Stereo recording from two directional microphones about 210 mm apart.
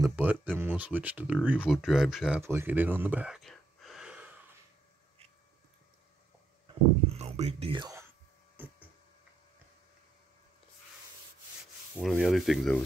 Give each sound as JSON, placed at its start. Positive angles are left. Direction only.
{"t": 0.0, "sound": "speech", "side_deg": -10}
{"t": 7.1, "sound": "whispering", "side_deg": -30}
{"t": 8.6, "sound": "a sound", "side_deg": -10}
{"t": 12.0, "sound": "rub", "side_deg": 0}